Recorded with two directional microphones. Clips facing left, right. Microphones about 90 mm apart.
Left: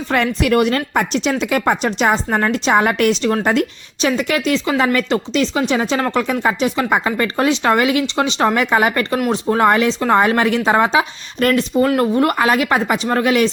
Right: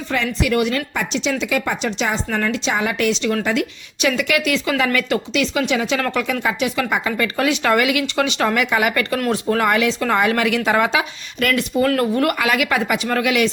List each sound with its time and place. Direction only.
0.1 s a woman's voice: 50° left (ahead or behind)
4.0 s speech: 35° left (ahead or behind)
9.1 s speech: 20° left (ahead or behind)